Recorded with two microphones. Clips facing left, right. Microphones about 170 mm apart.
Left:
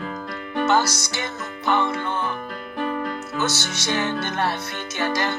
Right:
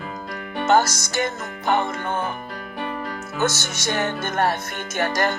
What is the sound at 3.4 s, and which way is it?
Music, 45° right (ahead or behind).